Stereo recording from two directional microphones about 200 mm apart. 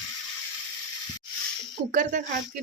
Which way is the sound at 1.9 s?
40° right (ahead or behind).